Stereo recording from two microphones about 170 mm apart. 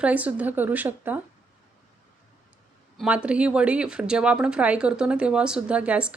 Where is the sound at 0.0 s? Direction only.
10° right (ahead or behind).